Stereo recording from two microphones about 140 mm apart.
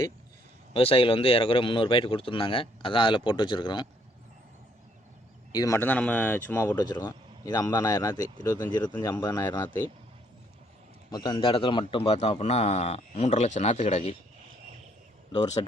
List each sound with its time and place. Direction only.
0.7 s speech: 40° left (ahead or behind)
5.5 s speech: 25° left (ahead or behind)
11.1 s a man's voice: 35° left (ahead or behind)